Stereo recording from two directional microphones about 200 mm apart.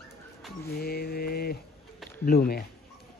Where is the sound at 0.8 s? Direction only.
50° left (ahead or behind).